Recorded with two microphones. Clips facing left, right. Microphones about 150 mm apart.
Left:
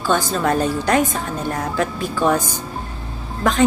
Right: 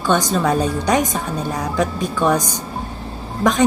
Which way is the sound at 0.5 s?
15° right (ahead or behind).